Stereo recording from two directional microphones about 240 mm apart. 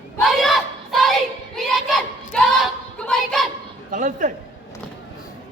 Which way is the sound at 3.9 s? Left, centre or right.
Right.